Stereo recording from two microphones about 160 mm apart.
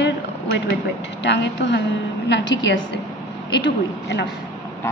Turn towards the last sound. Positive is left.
turn(degrees=90)